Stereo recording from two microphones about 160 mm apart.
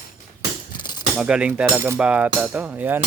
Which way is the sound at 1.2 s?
5° right (ahead or behind).